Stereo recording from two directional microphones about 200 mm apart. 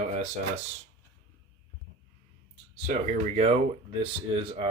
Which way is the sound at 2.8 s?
40° right (ahead or behind).